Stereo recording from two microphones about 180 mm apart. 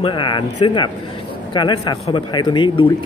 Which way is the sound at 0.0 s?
25° left (ahead or behind).